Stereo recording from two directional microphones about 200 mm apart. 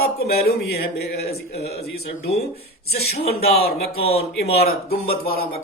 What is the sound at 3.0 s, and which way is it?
Speech, 50° left (ahead or behind).